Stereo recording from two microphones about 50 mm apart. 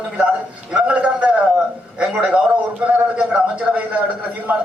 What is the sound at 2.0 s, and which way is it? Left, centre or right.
A man's voice, centre.